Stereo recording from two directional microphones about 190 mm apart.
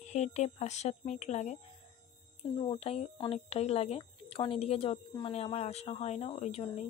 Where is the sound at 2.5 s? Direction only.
30° left (ahead or behind).